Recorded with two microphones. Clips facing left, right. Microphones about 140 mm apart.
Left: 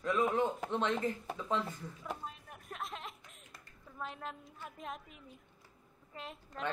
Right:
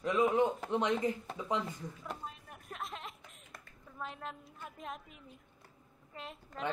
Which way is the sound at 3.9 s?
Centre (ahead or behind).